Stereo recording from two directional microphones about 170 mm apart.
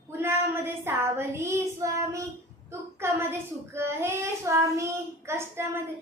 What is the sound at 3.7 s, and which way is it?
A child's voice, 15° right (ahead or behind).